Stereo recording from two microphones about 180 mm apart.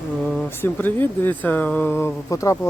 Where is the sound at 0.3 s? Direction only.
10° left (ahead or behind).